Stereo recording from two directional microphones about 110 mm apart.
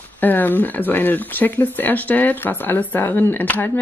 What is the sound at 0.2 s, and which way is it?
A woman's voice, 15° left (ahead or behind).